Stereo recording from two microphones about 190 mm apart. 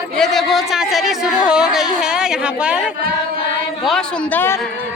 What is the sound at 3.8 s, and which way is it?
Speech, 5° left (ahead or behind).